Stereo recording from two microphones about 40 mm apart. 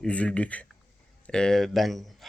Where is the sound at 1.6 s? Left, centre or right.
Centre.